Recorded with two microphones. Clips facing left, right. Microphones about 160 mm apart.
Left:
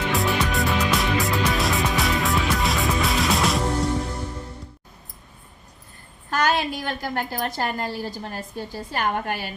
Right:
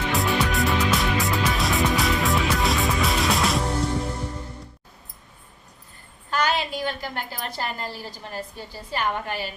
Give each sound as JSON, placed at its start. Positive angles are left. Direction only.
{"t": 0.1, "sound": "music", "side_deg": 0}
{"t": 6.3, "sound": "a sound", "side_deg": 45}
{"t": 7.9, "sound": "a woman's voice", "side_deg": 45}